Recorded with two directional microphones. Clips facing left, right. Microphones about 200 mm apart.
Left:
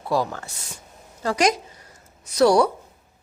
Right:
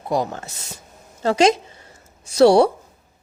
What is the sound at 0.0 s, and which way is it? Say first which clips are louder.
Speech: right 1 dB; 20° right (ahead or behind).